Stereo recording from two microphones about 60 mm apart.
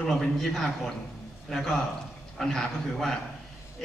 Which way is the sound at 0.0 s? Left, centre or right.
Centre.